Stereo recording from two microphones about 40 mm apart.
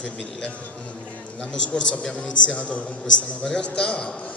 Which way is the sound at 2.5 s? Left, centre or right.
Left.